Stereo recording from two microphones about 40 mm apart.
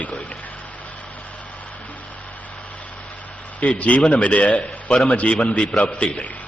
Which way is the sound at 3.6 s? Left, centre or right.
Left.